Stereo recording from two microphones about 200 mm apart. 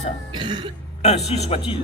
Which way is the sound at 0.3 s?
20° right (ahead or behind).